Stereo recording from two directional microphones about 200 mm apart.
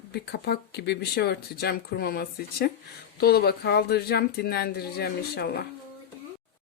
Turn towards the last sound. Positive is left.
turn(degrees=50)  # may be behind; listen again after turning